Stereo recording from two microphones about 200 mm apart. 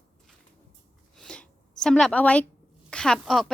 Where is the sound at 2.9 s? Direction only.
5° left (ahead or behind).